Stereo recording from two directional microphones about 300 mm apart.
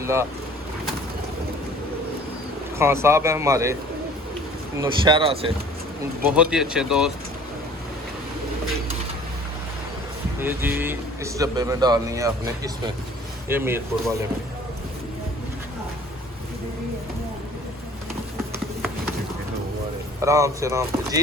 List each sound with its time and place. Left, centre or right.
0.0 s speech: centre
2.7 s speech: centre
4.8 s speech: centre
6.3 s speech: centre
10.4 s speech: centre
20.2 s speech: centre